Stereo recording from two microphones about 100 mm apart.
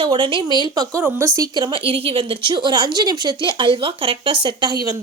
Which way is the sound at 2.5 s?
45° right (ahead or behind).